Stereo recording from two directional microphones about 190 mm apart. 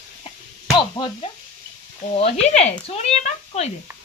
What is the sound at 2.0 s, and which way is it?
Speech, 45° left (ahead or behind).